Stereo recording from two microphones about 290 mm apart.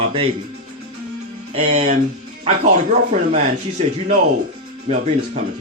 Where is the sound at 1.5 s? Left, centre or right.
Centre.